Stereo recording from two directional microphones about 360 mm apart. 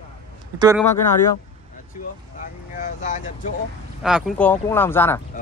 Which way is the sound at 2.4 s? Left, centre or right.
Left.